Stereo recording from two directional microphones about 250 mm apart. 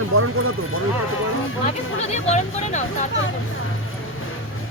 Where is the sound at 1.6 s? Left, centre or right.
Left.